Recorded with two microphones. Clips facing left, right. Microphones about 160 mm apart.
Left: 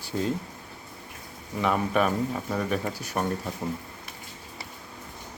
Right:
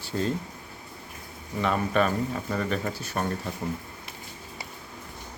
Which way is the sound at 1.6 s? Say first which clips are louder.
Even; 10° left (ahead or behind).